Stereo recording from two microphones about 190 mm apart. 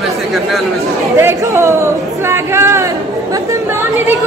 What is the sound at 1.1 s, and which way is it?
Speech, 15° right (ahead or behind).